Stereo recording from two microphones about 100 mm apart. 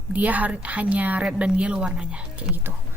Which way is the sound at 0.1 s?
15° right (ahead or behind).